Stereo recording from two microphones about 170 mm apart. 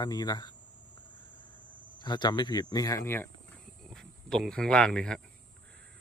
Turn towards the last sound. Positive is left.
turn(degrees=5)  # may be behind; listen again after turning